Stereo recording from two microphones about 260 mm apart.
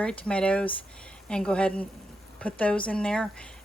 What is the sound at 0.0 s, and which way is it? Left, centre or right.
Speech, centre.